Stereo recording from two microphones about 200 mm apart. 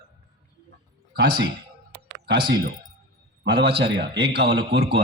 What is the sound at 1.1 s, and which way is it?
Speech, 50° right (ahead or behind).